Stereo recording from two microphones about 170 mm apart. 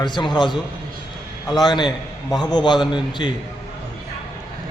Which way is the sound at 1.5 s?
25° left (ahead or behind).